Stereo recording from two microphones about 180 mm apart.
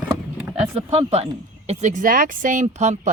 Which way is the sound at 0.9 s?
35° right (ahead or behind).